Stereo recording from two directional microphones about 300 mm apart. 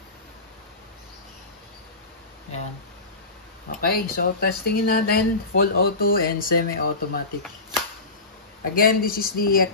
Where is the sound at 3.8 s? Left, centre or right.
Left.